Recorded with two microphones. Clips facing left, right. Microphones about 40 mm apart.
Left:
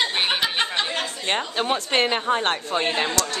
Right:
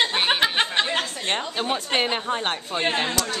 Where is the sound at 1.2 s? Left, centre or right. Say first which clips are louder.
Left 6 dB; centre.